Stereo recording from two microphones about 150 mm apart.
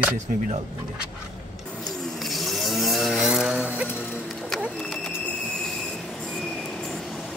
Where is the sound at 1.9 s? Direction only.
Centre (ahead or behind).